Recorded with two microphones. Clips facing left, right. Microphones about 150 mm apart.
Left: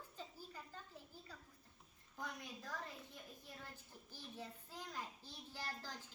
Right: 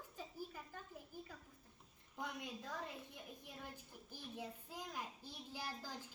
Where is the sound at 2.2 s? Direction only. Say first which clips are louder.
Right 3 dB; 20° right (ahead or behind).